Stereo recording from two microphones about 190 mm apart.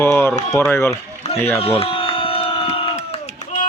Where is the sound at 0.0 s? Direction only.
15° left (ahead or behind).